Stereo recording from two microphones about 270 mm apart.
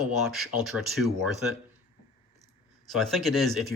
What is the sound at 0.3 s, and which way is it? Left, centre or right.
Speech, centre.